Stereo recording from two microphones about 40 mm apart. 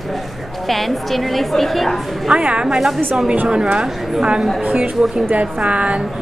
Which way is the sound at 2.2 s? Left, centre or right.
Right.